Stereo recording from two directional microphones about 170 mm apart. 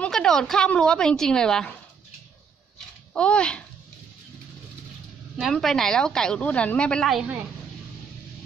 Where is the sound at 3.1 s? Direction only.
5° left (ahead or behind).